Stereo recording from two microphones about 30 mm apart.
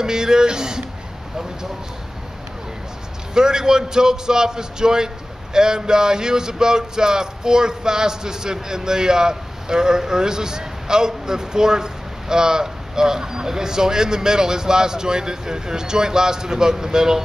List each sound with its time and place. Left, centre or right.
0.0 s a man's voice: right
3.3 s a man's voice: right